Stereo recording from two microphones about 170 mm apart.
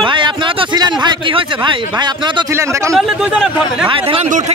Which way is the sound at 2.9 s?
Centre (ahead or behind).